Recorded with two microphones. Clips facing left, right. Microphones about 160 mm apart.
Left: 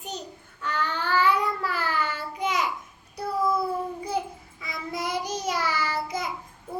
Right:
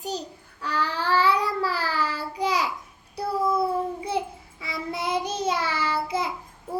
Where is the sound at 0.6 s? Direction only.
35° right (ahead or behind).